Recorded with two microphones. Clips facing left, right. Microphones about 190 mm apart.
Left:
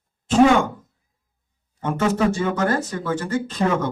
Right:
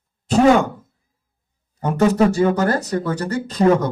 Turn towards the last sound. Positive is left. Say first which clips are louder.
# right 5 dB
turn(degrees=-40)  # may be behind; listen again after turning